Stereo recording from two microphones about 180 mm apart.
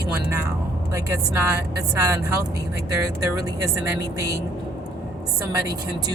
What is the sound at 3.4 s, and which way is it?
Speech, 20° right (ahead or behind).